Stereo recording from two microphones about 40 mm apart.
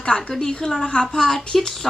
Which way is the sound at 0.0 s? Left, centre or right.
Centre.